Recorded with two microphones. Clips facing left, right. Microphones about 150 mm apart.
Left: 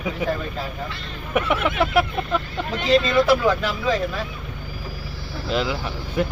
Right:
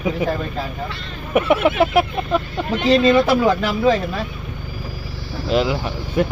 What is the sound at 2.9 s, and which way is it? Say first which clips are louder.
Speech: right 3 dB; 30° right (ahead or behind).